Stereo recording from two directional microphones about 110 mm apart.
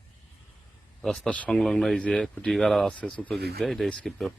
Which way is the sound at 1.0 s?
5° left (ahead or behind).